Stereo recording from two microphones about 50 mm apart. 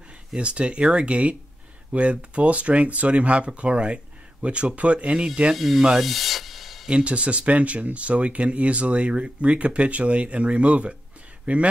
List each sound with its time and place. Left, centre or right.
0.4 s speech: right
5.8 s rub: centre
6.0 s a sound: centre
6.9 s speech: right